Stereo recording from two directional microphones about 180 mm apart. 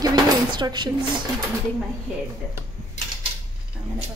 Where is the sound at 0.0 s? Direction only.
25° right (ahead or behind).